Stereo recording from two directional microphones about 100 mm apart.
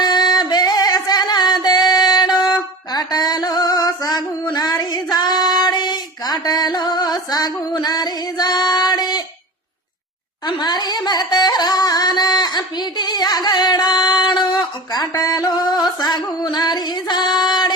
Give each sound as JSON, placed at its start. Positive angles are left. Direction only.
{"t": 0.0, "sound": "music", "side_deg": 45}
{"t": 5.1, "sound": "child singing", "side_deg": 45}
{"t": 10.4, "sound": "carnatic music", "side_deg": 45}